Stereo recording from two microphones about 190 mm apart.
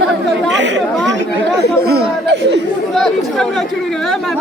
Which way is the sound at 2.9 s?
Centre (ahead or behind).